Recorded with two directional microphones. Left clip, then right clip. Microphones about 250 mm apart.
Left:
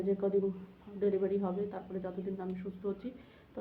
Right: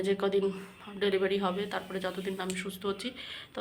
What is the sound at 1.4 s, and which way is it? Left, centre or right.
Speech, centre.